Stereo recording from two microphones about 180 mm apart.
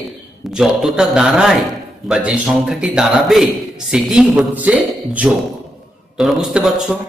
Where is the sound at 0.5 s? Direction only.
Centre (ahead or behind).